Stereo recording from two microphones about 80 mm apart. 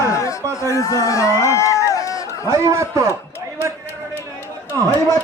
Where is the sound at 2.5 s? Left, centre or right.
Right.